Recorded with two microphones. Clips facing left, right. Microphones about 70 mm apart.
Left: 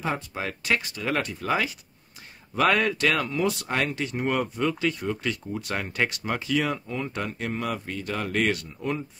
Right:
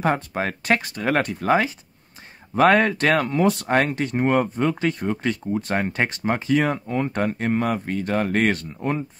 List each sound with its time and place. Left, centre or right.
0.0 s speech: right